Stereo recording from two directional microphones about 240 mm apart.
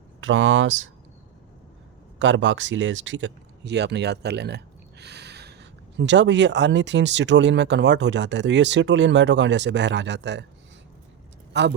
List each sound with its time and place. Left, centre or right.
0.2 s speech: right
2.1 s speech: right
11.5 s speech: right